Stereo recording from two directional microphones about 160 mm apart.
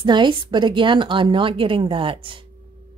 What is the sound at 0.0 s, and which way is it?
A woman's voice, 30° right (ahead or behind).